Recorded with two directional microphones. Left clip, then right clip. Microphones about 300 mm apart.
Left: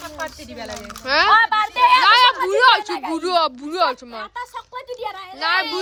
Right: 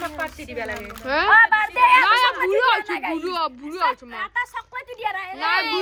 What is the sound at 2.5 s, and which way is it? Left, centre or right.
A woman's voice, centre.